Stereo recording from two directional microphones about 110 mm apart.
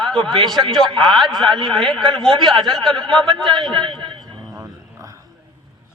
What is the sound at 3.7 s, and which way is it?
Speech, 45° right (ahead or behind).